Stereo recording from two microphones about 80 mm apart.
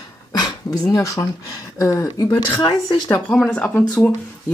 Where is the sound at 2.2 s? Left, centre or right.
Left.